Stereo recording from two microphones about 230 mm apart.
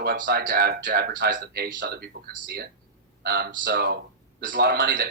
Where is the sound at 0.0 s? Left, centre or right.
Right.